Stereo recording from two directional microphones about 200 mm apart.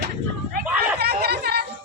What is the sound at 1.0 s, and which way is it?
Chatter, 55° right (ahead or behind).